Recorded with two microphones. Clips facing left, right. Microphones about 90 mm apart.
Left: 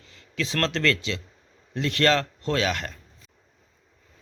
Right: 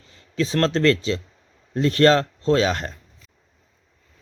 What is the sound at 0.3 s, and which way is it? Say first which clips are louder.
Speech: right 6 dB; 30° right (ahead or behind).